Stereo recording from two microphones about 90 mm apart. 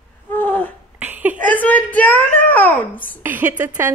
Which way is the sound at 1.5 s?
20° left (ahead or behind).